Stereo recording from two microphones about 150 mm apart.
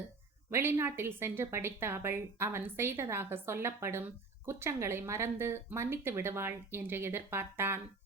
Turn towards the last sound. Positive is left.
turn(degrees=-15)  # may be behind; listen again after turning